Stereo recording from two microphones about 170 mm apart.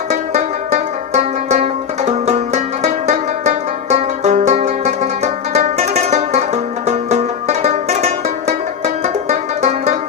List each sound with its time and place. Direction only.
0.1 s music: 40° right (ahead or behind)